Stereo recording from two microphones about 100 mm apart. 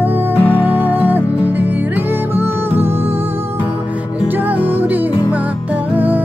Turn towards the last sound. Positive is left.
turn(degrees=-15)  # may be behind; listen again after turning